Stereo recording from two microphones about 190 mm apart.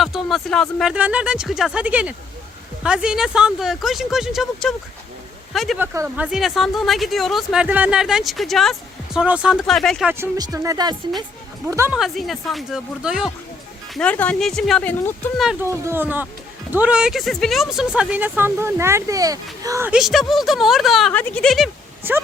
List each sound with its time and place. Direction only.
0.0 s speech: centre (ahead or behind)
5.8 s speech: 15° right (ahead or behind); by 10.1 s 5° left (ahead or behind)
10.1 s speech: 15° right (ahead or behind)
11.9 s speech: centre (ahead or behind)
13.9 s speech: 5° left (ahead or behind)
15.9 s speech: 10° right (ahead or behind)
22.0 s speech: 10° right (ahead or behind)